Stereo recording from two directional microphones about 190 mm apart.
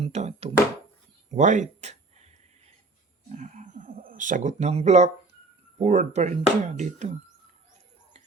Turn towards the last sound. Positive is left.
turn(degrees=-40)  # may be behind; listen again after turning